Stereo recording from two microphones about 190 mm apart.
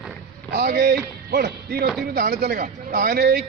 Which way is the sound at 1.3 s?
60° right (ahead or behind).